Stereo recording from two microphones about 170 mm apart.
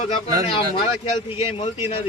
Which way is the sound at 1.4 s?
35° left (ahead or behind).